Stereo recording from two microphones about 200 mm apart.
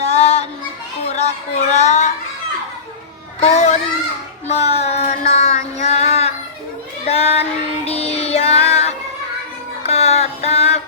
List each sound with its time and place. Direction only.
0.0 s child singing: 30° left (ahead or behind)
1.0 s a sound: 35° left (ahead or behind)
1.7 s a child's voice: 35° left (ahead or behind)
3.4 s a child's voice: 35° left (ahead or behind)
4.4 s child singing: 35° left (ahead or behind)
9.8 s music: 30° left (ahead or behind)